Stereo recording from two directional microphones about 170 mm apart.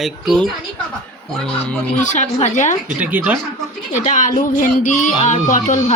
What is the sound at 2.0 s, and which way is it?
Speech, 45° left (ahead or behind).